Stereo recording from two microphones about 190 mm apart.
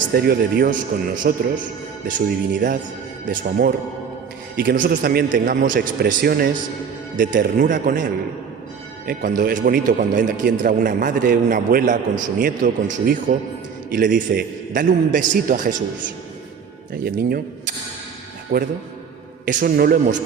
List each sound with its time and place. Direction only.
0.1 s speech: 55° right (ahead or behind)
16.9 s speech: 50° right (ahead or behind)
18.5 s speech: 55° right (ahead or behind)